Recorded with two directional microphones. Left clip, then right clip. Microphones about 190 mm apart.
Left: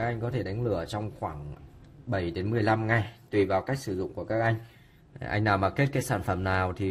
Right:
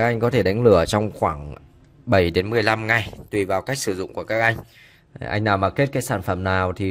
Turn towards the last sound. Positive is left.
turn(degrees=-30)  # may be behind; listen again after turning